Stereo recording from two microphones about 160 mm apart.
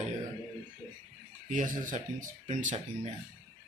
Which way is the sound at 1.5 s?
55° right (ahead or behind).